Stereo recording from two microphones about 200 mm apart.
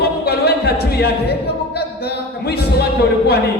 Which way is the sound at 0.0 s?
55° left (ahead or behind).